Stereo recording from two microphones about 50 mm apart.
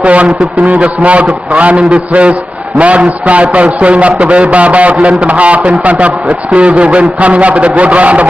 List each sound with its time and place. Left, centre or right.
0.0 s a man's voice: right